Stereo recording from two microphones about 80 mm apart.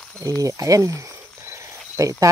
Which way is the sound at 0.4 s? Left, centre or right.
Right.